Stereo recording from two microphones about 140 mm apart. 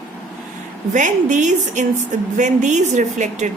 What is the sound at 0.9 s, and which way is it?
A woman's voice, 65° right (ahead or behind).